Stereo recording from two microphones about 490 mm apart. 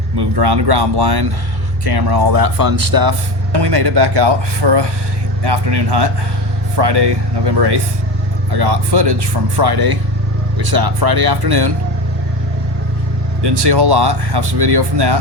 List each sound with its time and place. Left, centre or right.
0.2 s speech: right
13.4 s speech: right